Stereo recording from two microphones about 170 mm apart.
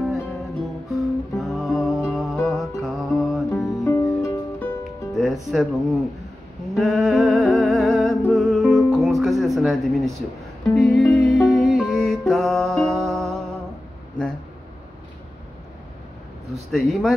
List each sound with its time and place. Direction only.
0.8 s music: centre (ahead or behind)
3.6 s music: 20° left (ahead or behind)
5.1 s music: centre (ahead or behind)
5.5 s speech: centre (ahead or behind)
6.7 s music: centre (ahead or behind)
16.7 s speech: centre (ahead or behind)